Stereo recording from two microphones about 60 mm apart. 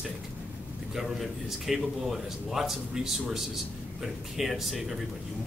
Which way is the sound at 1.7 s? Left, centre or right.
Centre.